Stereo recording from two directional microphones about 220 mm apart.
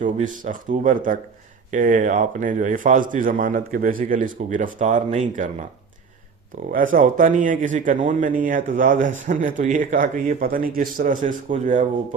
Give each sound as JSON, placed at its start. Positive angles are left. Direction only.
{"t": 0.0, "sound": "a man's voice", "side_deg": -35}
{"t": 6.7, "sound": "a man's voice", "side_deg": -40}